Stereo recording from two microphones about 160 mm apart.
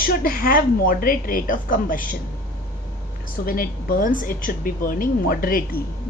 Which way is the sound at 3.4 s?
65° left (ahead or behind).